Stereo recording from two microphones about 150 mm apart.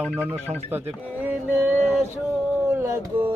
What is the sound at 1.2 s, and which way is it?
Music, 10° right (ahead or behind).